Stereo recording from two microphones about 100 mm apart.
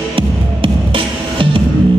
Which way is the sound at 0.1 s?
60° right (ahead or behind).